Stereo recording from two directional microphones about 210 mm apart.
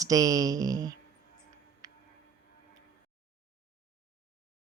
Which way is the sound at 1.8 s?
15° right (ahead or behind).